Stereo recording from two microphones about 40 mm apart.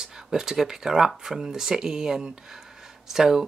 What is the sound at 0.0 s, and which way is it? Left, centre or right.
Speech, centre.